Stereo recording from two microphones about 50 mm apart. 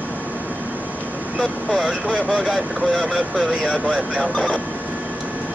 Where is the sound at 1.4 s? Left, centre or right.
Centre.